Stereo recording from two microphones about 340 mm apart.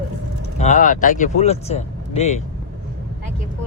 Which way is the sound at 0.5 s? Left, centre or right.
Left.